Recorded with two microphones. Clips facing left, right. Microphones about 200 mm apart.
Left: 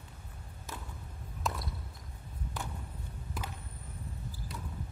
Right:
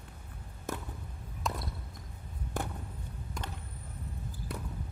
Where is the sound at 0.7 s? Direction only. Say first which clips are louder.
Right 8 dB; 55° right (ahead or behind).